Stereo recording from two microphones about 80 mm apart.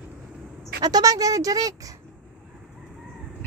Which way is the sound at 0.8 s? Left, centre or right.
Right.